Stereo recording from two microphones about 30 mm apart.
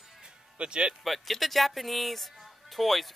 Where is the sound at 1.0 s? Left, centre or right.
Centre.